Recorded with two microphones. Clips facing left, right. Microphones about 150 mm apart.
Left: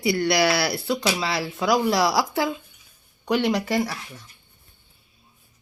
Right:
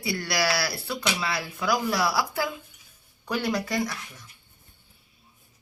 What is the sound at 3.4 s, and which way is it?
Speech, 30° left (ahead or behind).